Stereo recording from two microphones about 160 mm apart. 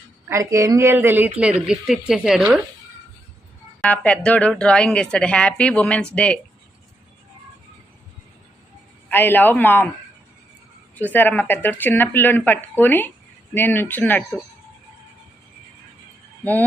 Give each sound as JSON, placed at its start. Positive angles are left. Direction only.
{"t": 0.3, "sound": "a woman's voice", "side_deg": -20}
{"t": 3.8, "sound": "speech", "side_deg": 10}
{"t": 9.0, "sound": "speech", "side_deg": 10}
{"t": 10.9, "sound": "speech", "side_deg": 10}
{"t": 16.4, "sound": "speech", "side_deg": 10}